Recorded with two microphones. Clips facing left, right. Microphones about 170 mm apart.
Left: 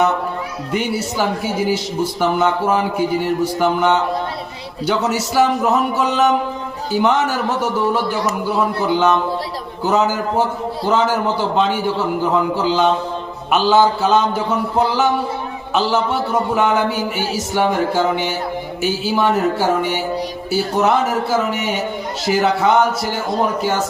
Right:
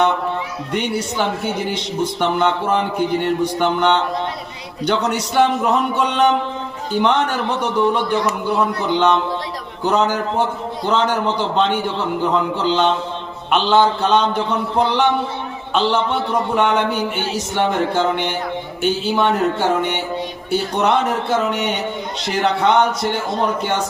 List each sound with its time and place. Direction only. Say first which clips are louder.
0.7 s a man's voice: left 1 dB; 5° left (ahead or behind)